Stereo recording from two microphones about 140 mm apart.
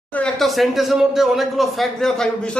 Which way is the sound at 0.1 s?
5° left (ahead or behind).